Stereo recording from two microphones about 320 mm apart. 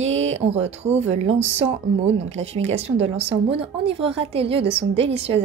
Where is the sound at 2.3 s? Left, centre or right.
Centre.